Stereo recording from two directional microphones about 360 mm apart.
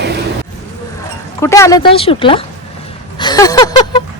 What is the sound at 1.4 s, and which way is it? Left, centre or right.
A woman's voice, centre.